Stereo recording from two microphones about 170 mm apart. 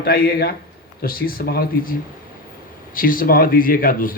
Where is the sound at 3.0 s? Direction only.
55° left (ahead or behind).